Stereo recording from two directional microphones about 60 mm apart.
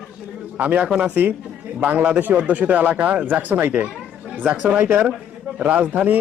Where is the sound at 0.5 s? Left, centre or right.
Right.